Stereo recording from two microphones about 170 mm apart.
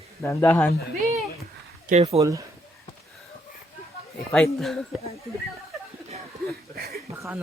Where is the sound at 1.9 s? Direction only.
40° right (ahead or behind).